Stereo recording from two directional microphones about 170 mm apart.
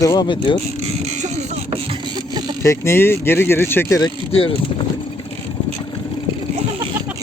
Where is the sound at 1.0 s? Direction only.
40° right (ahead or behind).